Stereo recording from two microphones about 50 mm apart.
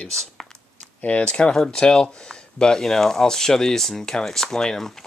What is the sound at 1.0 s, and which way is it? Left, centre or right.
Speech, left.